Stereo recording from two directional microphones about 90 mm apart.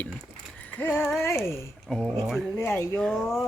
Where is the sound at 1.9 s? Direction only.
5° right (ahead or behind).